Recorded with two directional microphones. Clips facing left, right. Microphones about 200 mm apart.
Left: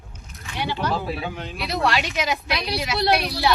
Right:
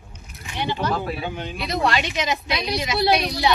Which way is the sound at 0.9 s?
Centre (ahead or behind).